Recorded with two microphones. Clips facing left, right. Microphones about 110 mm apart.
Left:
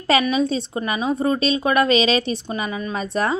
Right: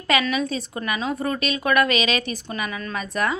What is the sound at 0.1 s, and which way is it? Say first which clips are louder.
A woman's voice: left 4 dB; 30° left (ahead or behind).